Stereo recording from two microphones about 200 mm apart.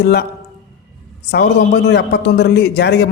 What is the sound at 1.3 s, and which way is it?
A man's voice, 60° left (ahead or behind).